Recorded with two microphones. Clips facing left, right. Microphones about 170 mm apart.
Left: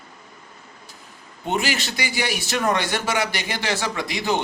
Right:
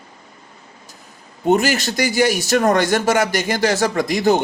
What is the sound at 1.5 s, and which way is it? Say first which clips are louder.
A man's voice: right 8 dB; 45° right (ahead or behind).